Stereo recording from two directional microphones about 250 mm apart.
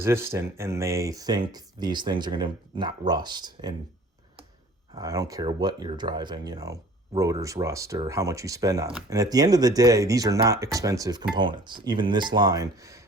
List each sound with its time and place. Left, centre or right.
0.0 s speech: centre
4.9 s speech: centre